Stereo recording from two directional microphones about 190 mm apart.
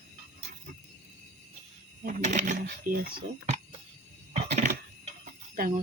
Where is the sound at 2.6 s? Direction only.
50° right (ahead or behind).